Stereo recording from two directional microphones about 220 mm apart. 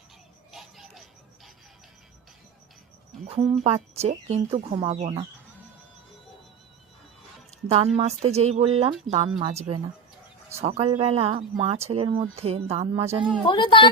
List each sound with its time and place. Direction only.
0.5 s music: centre (ahead or behind)
3.6 s speech: 30° right (ahead or behind)
7.7 s speech: 30° right (ahead or behind)
13.5 s speech: 20° left (ahead or behind)